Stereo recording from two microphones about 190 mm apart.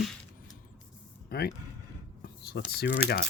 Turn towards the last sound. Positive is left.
turn(degrees=50)  # may be behind; listen again after turning